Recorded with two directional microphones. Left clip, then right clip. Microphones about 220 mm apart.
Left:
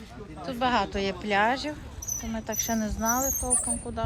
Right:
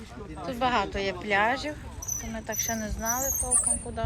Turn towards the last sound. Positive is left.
turn(degrees=15)  # may be behind; listen again after turning